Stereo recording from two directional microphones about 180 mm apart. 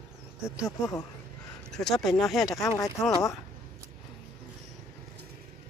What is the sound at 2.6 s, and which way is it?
Speech, 15° left (ahead or behind).